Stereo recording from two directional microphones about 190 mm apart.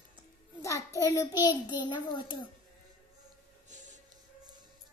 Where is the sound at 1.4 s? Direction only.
25° left (ahead or behind).